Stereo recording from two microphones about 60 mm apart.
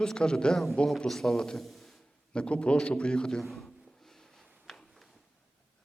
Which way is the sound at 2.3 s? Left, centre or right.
Centre.